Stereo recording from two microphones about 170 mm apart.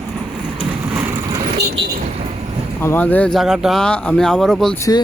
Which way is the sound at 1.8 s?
30° right (ahead or behind).